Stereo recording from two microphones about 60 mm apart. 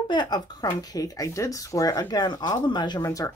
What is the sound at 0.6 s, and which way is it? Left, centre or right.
Speech, left.